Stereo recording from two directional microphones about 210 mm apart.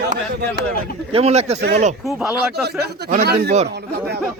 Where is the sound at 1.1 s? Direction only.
30° right (ahead or behind).